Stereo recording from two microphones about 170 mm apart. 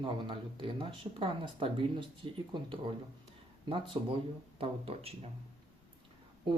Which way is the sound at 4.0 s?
25° right (ahead or behind).